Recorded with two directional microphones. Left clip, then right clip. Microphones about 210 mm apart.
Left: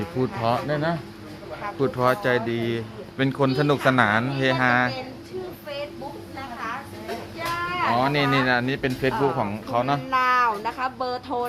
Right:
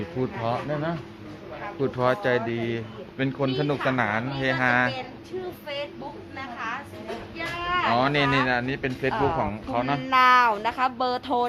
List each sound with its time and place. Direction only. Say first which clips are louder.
0.2 s speech: left 4 dB; 15° left (ahead or behind)
7.9 s speech: left 2 dB; centre (ahead or behind); by 10.0 s 15° left (ahead or behind)
10.1 s speech: right 4 dB; 40° right (ahead or behind)